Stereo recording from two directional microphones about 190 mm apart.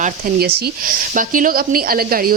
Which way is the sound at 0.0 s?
55° right (ahead or behind).